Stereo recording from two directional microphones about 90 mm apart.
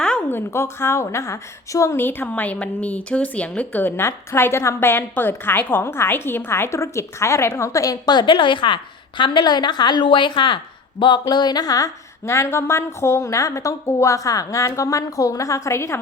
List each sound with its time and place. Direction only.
0.0 s a sound: 10° left (ahead or behind)
0.3 s a woman's voice: 25° left (ahead or behind); by 10.6 s 65° left (ahead or behind)
11.0 s music: 55° left (ahead or behind)
12.2 s a woman's voice: 30° left (ahead or behind)